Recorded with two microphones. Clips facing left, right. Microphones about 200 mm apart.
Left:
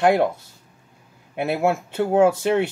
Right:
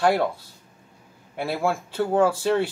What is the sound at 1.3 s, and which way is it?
Speech, 20° left (ahead or behind).